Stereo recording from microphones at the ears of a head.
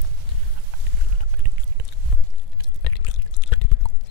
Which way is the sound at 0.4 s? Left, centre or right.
Right.